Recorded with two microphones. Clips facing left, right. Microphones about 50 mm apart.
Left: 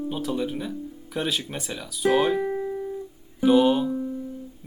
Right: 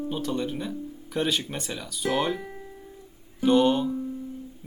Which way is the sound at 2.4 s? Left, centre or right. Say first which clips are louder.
Left 13 dB; left.